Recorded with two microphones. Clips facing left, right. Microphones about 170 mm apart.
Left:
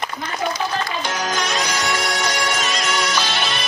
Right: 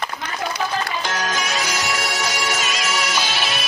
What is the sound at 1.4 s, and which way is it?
Music, 5° right (ahead or behind).